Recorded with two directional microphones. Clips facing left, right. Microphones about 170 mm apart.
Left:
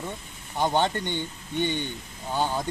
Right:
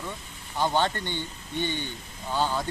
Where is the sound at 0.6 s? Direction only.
20° left (ahead or behind).